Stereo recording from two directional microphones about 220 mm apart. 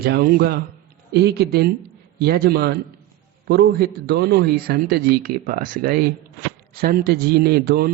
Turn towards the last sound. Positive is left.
turn(degrees=-45)  # may be behind; listen again after turning